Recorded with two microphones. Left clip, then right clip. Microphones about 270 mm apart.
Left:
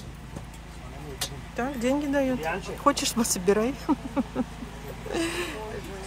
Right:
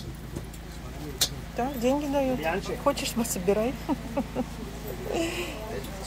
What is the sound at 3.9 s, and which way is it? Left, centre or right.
Speech, left.